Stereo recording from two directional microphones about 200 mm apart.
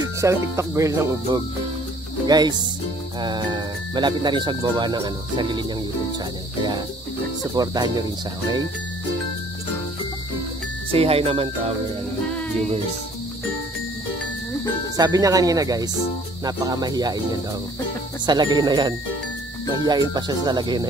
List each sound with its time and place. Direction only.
0.0 s speech: 15° right (ahead or behind)
7.5 s speech: 20° right (ahead or behind)
10.9 s speech: 30° right (ahead or behind)
15.0 s speech: 20° right (ahead or behind)